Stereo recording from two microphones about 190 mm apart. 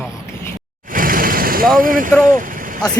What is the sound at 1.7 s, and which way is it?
Speech, 45° right (ahead or behind).